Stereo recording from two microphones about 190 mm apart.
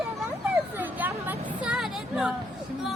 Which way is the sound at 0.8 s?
10° right (ahead or behind).